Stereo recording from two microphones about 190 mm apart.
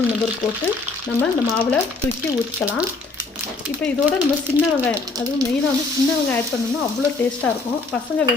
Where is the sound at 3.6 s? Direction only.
5° right (ahead or behind).